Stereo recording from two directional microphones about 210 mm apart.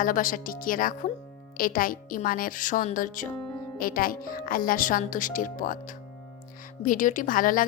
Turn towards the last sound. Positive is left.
turn(degrees=40)  # may be behind; listen again after turning